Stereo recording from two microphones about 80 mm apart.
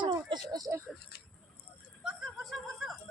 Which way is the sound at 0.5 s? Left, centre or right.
Right.